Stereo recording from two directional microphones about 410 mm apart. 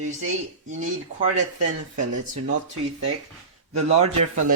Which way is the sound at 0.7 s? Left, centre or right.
Centre.